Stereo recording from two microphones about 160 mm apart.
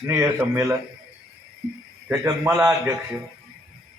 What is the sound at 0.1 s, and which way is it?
Speech, 15° right (ahead or behind).